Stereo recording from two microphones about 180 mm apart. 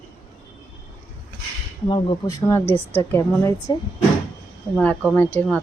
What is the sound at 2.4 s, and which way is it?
A woman's voice, 15° left (ahead or behind).